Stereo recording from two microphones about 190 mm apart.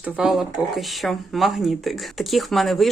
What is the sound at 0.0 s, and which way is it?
Speech, centre (ahead or behind).